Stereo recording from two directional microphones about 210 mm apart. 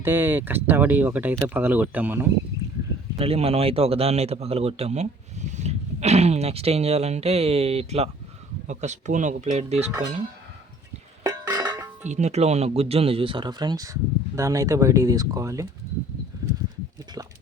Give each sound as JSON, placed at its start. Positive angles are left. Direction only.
{"t": 0.0, "sound": "speech", "side_deg": -10}
{"t": 3.2, "sound": "a man's voice", "side_deg": -30}
{"t": 11.2, "sound": "a sound", "side_deg": -15}
{"t": 12.0, "sound": "a man's voice", "side_deg": -35}